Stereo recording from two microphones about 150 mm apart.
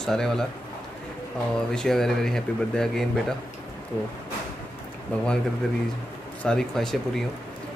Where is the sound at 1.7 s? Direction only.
5° left (ahead or behind).